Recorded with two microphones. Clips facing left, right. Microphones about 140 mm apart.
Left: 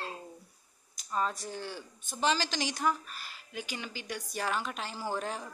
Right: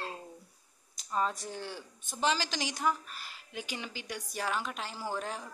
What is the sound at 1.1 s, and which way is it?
A woman's voice, 15° right (ahead or behind).